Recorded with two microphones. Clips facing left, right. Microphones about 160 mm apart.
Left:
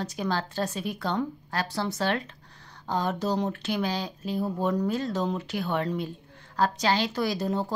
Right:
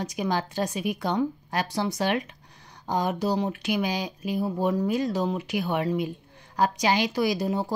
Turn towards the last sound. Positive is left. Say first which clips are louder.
# right 2 dB
turn(degrees=-10)  # may be behind; listen again after turning